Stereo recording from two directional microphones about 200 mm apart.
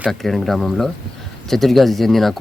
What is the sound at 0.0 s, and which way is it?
Speech, centre (ahead or behind).